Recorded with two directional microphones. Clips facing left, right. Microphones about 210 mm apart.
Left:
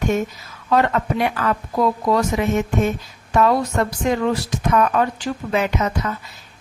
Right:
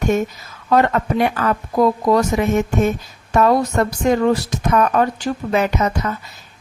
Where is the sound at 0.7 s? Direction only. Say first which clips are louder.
Right 2 dB; 45° right (ahead or behind).